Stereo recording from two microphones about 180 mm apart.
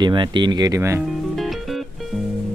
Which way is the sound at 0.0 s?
25° right (ahead or behind).